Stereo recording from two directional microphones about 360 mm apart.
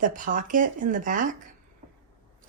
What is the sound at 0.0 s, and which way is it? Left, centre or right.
Speech, right.